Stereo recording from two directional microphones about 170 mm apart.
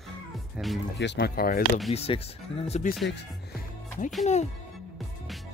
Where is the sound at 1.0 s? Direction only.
80° left; by 1.7 s 60° left (ahead or behind).